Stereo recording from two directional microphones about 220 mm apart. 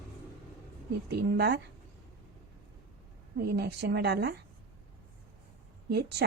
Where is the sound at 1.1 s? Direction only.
50° right (ahead or behind).